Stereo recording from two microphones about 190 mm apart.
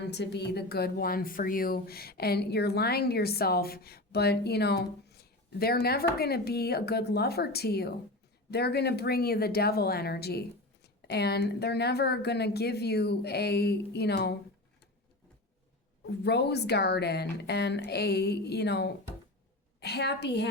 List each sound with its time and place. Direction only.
0.0 s speech: 60° left (ahead or behind)
16.0 s speech: 60° left (ahead or behind)